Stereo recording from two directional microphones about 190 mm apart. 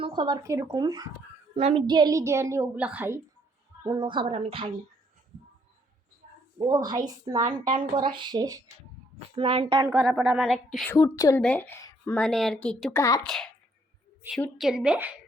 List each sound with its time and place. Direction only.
0.0 s speech: 25° right (ahead or behind)
1.5 s a woman's voice: 30° right (ahead or behind); by 3.2 s 10° right (ahead or behind)
3.8 s speech: 25° right (ahead or behind)
6.7 s speech: 20° right (ahead or behind)
10.0 s a woman's voice: 5° right (ahead or behind)
10.9 s speech: 15° left (ahead or behind)
13.2 s a woman's voice: 5° left (ahead or behind)